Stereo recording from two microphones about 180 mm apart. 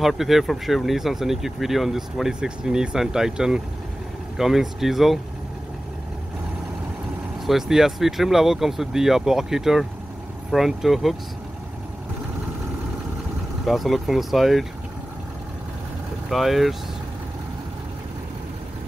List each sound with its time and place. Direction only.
0.0 s speech: centre (ahead or behind)
7.4 s speech: centre (ahead or behind)
13.7 s speech: centre (ahead or behind)
16.3 s speech: centre (ahead or behind)